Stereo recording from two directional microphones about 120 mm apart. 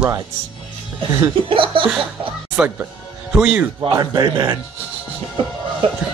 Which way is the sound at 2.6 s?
5° right (ahead or behind).